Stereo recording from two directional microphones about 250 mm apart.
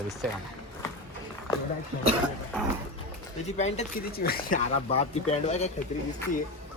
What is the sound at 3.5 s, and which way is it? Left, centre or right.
Speech, left.